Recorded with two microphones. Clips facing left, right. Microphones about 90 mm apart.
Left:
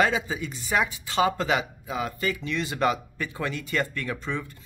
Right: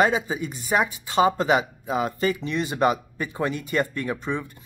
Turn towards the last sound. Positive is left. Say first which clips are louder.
# right 3 dB
turn(degrees=-20)  # may be behind; listen again after turning